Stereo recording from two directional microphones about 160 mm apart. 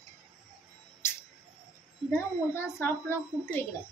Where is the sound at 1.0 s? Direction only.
15° left (ahead or behind).